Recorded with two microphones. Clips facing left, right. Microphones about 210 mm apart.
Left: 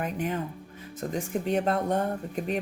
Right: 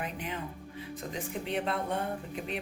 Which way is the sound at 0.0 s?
45° left (ahead or behind).